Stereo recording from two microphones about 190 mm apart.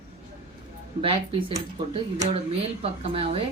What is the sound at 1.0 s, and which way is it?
A woman's voice, 30° right (ahead or behind).